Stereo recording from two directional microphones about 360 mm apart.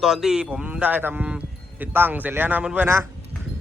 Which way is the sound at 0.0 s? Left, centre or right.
Centre.